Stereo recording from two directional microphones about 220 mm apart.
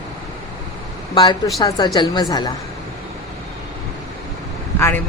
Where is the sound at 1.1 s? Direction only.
20° left (ahead or behind).